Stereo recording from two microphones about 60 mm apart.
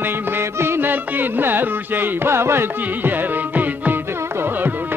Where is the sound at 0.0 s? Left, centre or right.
Right.